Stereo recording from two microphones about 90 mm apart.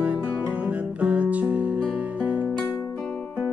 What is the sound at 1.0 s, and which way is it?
Music, 15° right (ahead or behind).